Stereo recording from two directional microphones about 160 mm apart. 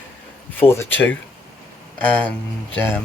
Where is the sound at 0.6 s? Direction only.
15° left (ahead or behind).